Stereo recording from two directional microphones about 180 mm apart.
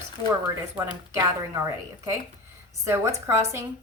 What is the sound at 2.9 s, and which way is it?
Speech, 15° right (ahead or behind).